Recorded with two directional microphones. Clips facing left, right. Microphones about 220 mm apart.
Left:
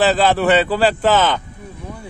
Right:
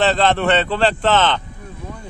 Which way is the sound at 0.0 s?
5° left (ahead or behind).